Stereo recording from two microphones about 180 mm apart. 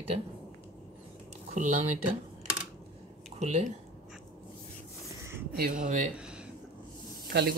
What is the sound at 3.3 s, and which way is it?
Speech, 40° right (ahead or behind).